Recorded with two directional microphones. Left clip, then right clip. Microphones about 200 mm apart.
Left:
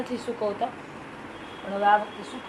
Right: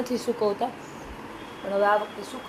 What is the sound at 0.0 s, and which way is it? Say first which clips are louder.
Speech: right 3 dB; 45° right (ahead or behind).